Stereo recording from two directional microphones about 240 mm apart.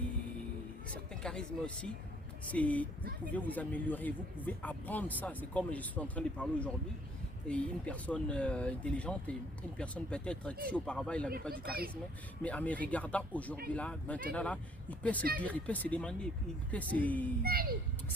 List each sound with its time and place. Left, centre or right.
1.1 s a man's voice: centre
12.4 s a man's voice: centre
17.4 s a child's voice: right